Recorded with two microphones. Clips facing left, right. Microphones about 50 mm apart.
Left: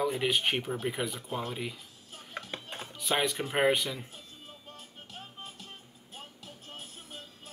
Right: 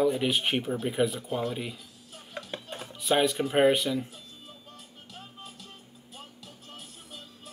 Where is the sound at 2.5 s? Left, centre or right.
Left.